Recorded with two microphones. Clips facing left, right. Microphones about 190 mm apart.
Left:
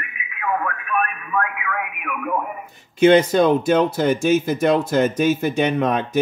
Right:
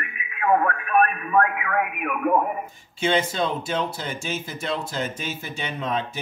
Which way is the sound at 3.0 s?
70° left (ahead or behind).